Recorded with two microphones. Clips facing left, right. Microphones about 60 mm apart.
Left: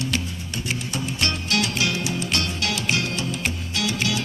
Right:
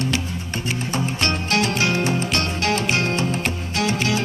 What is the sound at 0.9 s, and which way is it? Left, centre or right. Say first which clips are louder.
Music: right 5 dB; right.